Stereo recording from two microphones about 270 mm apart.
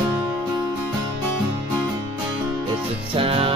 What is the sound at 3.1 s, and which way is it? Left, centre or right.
Music, centre.